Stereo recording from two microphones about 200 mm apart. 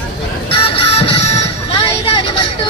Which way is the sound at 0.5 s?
25° left (ahead or behind).